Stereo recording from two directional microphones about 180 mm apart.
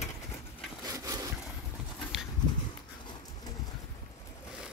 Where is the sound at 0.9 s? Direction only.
20° right (ahead or behind).